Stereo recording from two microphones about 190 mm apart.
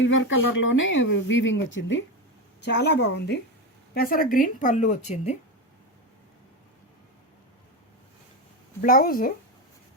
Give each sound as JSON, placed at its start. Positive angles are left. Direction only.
{"t": 0.0, "sound": "speech", "side_deg": 80}
{"t": 2.6, "sound": "a woman's voice", "side_deg": 65}
{"t": 3.9, "sound": "a woman's voice", "side_deg": 50}
{"t": 8.8, "sound": "a woman's voice", "side_deg": 50}